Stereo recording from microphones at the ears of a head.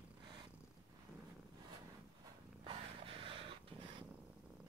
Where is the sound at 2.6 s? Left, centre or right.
Right.